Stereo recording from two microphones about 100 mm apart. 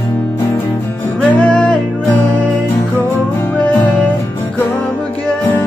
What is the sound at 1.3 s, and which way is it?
Music, 10° left (ahead or behind).